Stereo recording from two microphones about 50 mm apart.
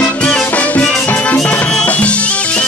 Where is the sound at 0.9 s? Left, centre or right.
Left.